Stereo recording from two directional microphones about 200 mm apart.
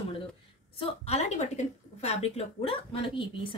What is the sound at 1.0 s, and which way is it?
A woman's voice, 35° left (ahead or behind).